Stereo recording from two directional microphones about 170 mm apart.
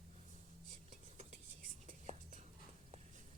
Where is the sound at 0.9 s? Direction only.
45° right (ahead or behind).